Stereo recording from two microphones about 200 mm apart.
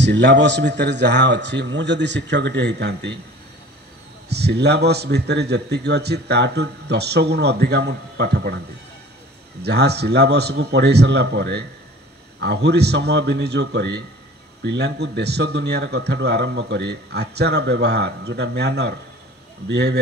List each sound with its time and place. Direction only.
0.0 s a man's voice: 60° right (ahead or behind)
4.3 s a man's voice: 55° right (ahead or behind)
9.6 s a man's voice: 55° right (ahead or behind)